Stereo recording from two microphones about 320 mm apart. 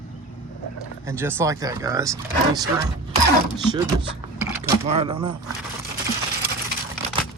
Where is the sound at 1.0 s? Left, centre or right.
Centre.